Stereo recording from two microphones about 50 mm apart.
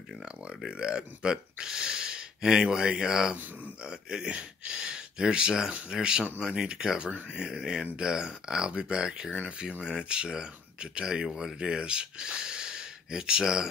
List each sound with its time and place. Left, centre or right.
0.2 s speech: centre
3.3 s speech: right
3.8 s speech: centre